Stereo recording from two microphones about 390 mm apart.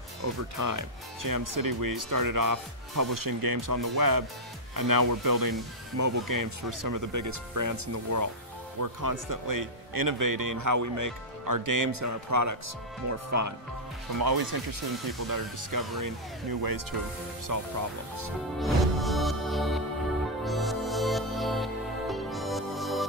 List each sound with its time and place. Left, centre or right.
0.2 s speech: right
5.9 s speech: right
14.2 s speech: right
18.6 s music: centre